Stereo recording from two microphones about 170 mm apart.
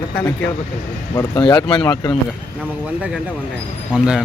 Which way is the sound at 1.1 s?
25° left (ahead or behind).